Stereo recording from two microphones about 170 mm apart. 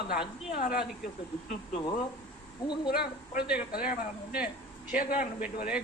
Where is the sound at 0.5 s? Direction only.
60° left (ahead or behind).